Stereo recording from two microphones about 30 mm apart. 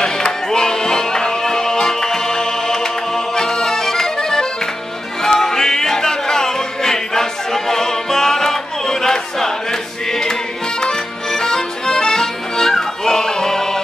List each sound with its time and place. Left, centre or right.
0.0 s music: left
3.3 s accordion: centre
5.2 s music: centre
10.8 s accordion: left
13.0 s music: centre